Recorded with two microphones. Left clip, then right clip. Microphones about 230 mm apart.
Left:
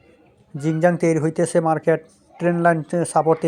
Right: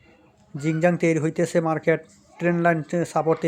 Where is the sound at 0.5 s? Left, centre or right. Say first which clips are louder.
Left 3 dB; centre.